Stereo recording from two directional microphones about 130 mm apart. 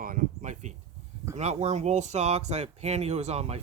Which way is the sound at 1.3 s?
60° right (ahead or behind).